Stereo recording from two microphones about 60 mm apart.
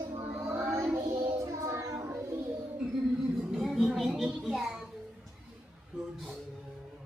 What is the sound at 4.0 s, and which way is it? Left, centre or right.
Music, centre.